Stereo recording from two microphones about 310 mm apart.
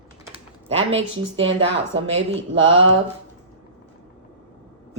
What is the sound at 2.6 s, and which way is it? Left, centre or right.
Speech, right.